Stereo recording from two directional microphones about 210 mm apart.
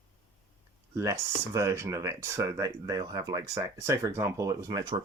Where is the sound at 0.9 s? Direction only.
15° right (ahead or behind).